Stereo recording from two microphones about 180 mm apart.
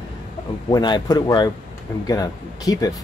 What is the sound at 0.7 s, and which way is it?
Speech, 25° left (ahead or behind).